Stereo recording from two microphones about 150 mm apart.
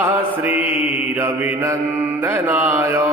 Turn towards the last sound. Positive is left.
turn(degrees=-20)  # may be behind; listen again after turning